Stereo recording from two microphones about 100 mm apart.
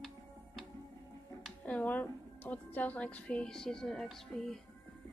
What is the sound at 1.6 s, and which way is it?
A woman's voice, 15° left (ahead or behind).